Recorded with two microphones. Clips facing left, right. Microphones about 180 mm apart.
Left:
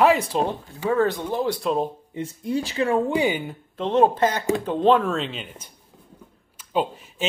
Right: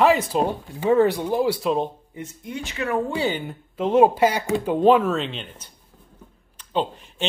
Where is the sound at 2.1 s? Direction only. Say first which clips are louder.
Left 7 dB; 30° left (ahead or behind).